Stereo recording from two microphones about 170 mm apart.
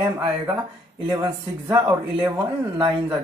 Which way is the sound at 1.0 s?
15° right (ahead or behind).